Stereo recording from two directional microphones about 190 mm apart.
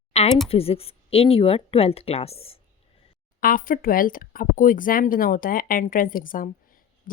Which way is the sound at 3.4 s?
45° left (ahead or behind).